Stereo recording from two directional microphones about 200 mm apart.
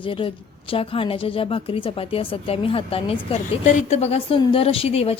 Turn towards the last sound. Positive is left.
turn(degrees=30)  # may be behind; listen again after turning